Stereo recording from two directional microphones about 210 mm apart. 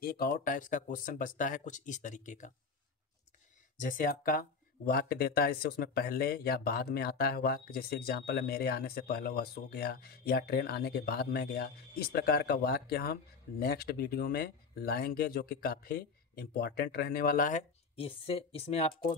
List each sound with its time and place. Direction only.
0.0 s speech: 45° left (ahead or behind)
3.7 s speech: 40° left (ahead or behind)